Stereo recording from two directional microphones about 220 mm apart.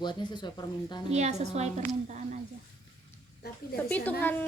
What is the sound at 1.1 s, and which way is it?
Speech, 30° right (ahead or behind).